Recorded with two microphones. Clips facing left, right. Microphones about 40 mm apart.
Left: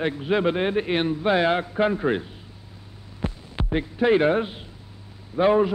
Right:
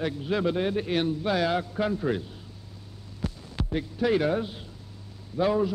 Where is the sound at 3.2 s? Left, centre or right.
Left.